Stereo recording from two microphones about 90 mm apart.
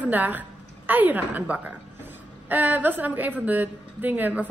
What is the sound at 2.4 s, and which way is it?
A woman's voice, 20° right (ahead or behind).